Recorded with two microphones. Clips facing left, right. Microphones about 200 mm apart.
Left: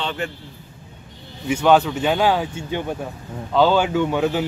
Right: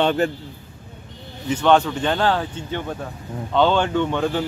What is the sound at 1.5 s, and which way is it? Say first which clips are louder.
Speech: left 1 dB; 5° left (ahead or behind).